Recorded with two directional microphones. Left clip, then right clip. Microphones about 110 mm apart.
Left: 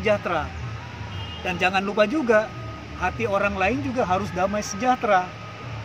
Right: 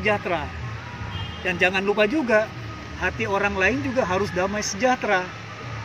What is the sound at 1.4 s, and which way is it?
Speech, 30° left (ahead or behind).